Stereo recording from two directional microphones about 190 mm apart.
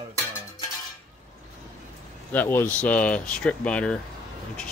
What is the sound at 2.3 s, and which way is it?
Speech, 10° left (ahead or behind).